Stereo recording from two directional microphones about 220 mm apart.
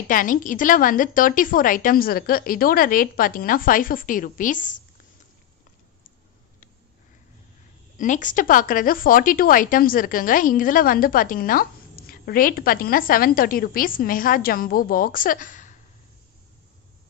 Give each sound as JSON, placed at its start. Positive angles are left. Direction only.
{"t": 0.1, "sound": "speech", "side_deg": 35}
{"t": 8.0, "sound": "speech", "side_deg": 35}